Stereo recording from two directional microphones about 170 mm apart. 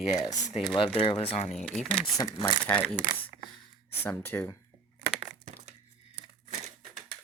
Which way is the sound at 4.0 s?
10° left (ahead or behind).